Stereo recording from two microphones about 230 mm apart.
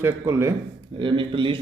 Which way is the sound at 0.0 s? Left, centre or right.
Centre.